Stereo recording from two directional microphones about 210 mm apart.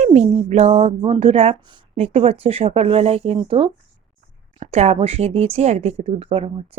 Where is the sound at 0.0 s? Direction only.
35° right (ahead or behind).